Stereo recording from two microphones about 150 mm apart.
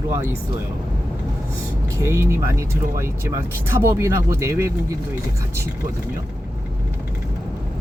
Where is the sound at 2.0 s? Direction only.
20° right (ahead or behind).